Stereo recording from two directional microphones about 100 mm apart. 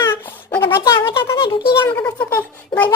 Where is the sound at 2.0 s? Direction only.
20° left (ahead or behind).